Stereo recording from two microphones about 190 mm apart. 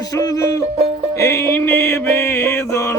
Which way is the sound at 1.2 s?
15° left (ahead or behind).